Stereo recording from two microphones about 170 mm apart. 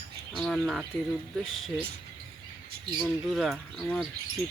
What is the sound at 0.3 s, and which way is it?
Bird, centre (ahead or behind).